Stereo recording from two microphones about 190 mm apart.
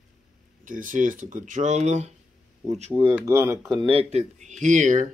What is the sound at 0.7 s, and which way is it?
Speech, 45° right (ahead or behind).